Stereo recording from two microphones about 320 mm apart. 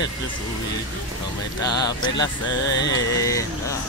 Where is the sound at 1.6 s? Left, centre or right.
Centre.